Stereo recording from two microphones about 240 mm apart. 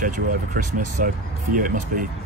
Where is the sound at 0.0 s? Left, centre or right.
Right.